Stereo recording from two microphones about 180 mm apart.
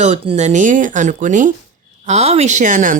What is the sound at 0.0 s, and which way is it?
Speech, 40° right (ahead or behind).